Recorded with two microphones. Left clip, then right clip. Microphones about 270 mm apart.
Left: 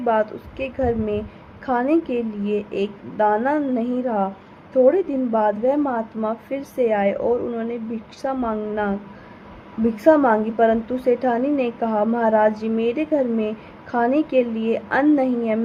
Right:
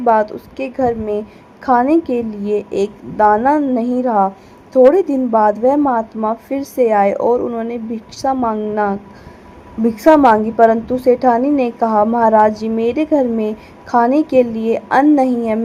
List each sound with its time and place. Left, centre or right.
0.0 s a woman's voice: centre
10.0 s a woman's voice: centre